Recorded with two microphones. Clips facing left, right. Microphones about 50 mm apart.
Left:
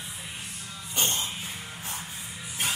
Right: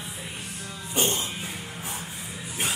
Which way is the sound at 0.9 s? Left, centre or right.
Right.